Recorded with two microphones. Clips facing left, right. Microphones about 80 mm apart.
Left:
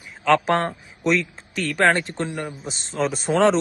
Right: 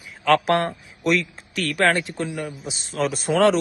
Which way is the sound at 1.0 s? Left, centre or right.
Centre.